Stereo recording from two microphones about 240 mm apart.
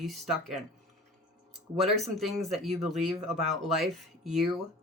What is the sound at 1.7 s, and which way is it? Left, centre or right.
Speech, centre.